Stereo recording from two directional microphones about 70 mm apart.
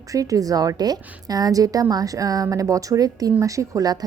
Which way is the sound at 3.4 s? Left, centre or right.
Right.